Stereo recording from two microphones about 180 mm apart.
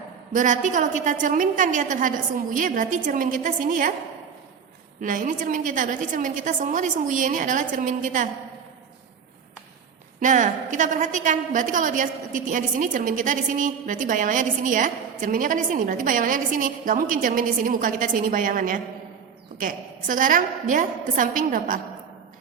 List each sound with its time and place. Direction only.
0.3 s a woman's voice: 45° right (ahead or behind)
4.9 s a woman's voice: 45° right (ahead or behind)
10.2 s a woman's voice: 45° right (ahead or behind)